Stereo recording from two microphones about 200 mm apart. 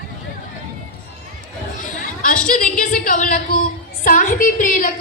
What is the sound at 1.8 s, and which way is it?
A woman's voice, 40° left (ahead or behind).